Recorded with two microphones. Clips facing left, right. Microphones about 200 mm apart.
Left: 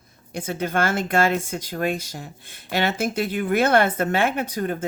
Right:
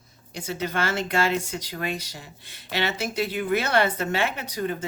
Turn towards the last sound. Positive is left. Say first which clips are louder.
# left 4 dB
turn(degrees=50)  # may be behind; listen again after turning